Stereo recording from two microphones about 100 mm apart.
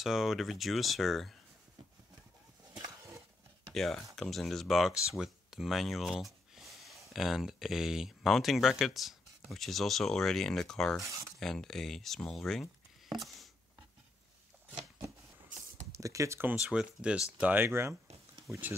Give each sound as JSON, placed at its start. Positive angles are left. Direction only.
{"t": 0.0, "sound": "speech", "side_deg": -5}
{"t": 3.7, "sound": "speech", "side_deg": 5}
{"t": 15.9, "sound": "speech", "side_deg": -30}
{"t": 16.6, "sound": "speech", "side_deg": -10}